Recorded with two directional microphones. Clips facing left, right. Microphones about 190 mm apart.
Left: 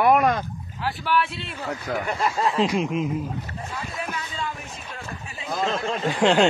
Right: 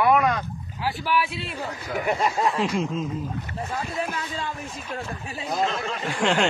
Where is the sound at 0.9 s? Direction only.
Centre (ahead or behind).